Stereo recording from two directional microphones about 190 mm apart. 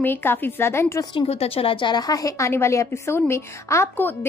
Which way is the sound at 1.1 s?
30° left (ahead or behind).